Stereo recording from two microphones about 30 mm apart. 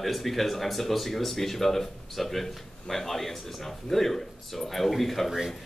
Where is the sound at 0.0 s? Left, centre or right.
Centre.